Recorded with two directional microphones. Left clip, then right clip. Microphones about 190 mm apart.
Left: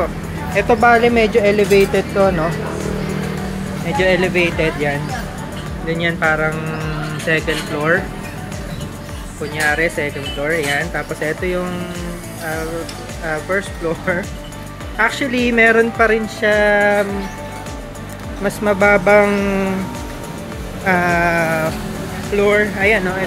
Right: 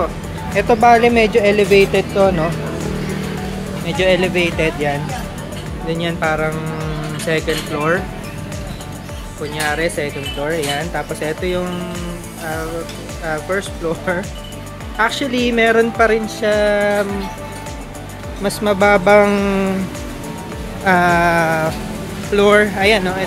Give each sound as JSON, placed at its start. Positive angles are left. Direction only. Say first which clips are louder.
{"t": 0.8, "sound": "speech", "louder": "right 2 dB", "side_deg": -20}
{"t": 3.8, "sound": "speech", "louder": "even", "side_deg": -15}
{"t": 7.2, "sound": "speech", "louder": "left 1 dB", "side_deg": -15}
{"t": 9.6, "sound": "speech", "louder": "left 2 dB", "side_deg": -15}
{"t": 13.3, "sound": "speech", "louder": "left 1 dB", "side_deg": -10}
{"t": 18.4, "sound": "speech", "louder": "even", "side_deg": -20}
{"t": 20.8, "sound": "speech", "louder": "right 2 dB", "side_deg": -20}
{"t": 22.3, "sound": "speech", "louder": "right 3 dB", "side_deg": -35}